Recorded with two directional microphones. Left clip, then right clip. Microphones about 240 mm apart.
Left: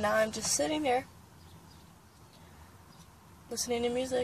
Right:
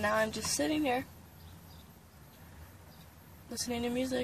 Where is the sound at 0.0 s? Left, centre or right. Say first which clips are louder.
Left 2 dB; centre.